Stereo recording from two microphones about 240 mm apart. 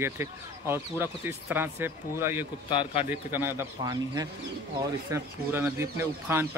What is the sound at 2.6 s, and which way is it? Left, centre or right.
Speech, left.